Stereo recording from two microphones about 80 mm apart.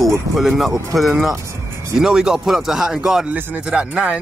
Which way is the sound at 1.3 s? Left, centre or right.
Right.